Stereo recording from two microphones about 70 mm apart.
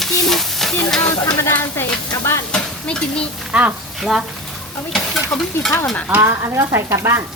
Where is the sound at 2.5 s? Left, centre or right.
Centre.